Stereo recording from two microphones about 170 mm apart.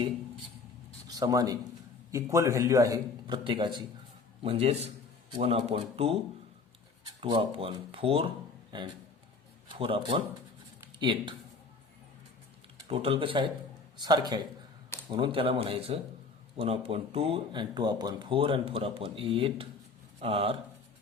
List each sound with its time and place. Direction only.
0.9 s a sound: 20° right (ahead or behind)
2.1 s a man's voice: 15° right (ahead or behind); by 6.1 s 35° right (ahead or behind)
7.2 s speech: 30° right (ahead or behind)
9.6 s a man's voice: 30° right (ahead or behind)
12.9 s a man's voice: 30° right (ahead or behind)